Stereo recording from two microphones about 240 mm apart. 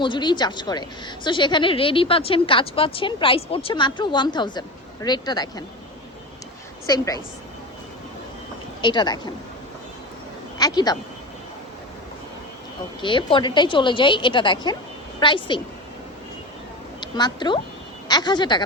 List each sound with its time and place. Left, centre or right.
0.0 s a woman's voice: centre
6.8 s speech: centre
8.8 s speech: centre
10.6 s speech: centre
13.0 s a woman's voice: centre
17.0 s speech: centre